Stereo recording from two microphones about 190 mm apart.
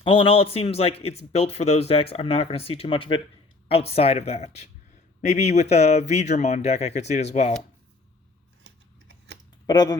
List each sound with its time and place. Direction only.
0.0 s a man's voice: 30° left (ahead or behind)
8.6 s scissors: 75° right (ahead or behind)
9.6 s speech: 20° left (ahead or behind)